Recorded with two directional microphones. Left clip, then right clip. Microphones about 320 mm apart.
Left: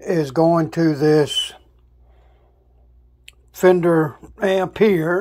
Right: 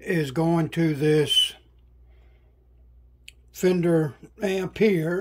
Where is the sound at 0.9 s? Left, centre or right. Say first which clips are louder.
Left 6 dB; centre.